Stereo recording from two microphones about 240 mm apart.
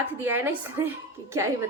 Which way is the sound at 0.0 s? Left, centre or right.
Centre.